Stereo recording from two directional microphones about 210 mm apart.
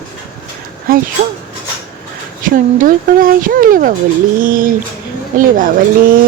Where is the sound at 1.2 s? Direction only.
35° right (ahead or behind).